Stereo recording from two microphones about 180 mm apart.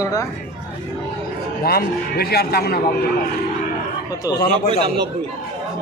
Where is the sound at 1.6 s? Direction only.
60° left (ahead or behind).